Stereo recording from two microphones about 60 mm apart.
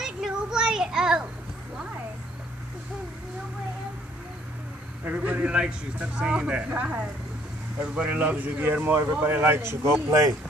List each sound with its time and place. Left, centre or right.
0.0 s child singing: centre
5.0 s a man's voice: right